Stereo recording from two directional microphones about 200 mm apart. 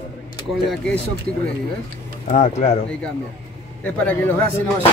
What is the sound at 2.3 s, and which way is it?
Speech, 35° left (ahead or behind).